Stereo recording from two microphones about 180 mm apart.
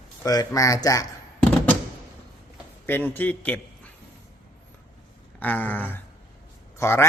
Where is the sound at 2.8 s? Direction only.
10° left (ahead or behind).